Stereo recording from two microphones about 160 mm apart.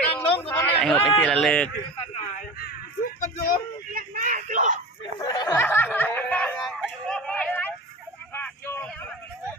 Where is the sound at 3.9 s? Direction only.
60° right (ahead or behind).